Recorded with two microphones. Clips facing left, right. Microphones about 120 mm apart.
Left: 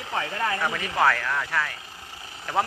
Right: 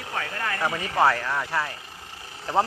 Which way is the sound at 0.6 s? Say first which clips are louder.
Right 3 dB; 20° right (ahead or behind).